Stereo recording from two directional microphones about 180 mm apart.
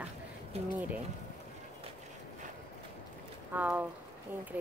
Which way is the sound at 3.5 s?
10° right (ahead or behind).